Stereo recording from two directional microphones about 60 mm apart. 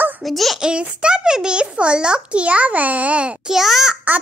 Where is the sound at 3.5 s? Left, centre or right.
Centre.